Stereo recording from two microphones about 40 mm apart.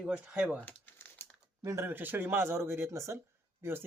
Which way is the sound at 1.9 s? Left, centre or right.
Right.